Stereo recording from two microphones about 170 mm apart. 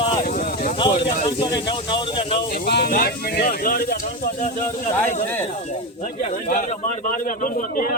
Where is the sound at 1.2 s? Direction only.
25° left (ahead or behind).